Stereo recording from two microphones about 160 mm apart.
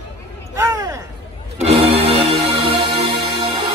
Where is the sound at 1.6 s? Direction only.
40° right (ahead or behind).